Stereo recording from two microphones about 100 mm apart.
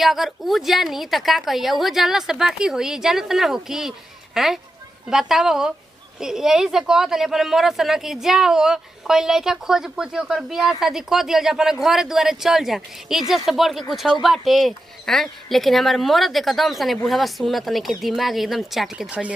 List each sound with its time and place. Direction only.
0.0 s speech: centre (ahead or behind)
19.0 s speech: 15° right (ahead or behind)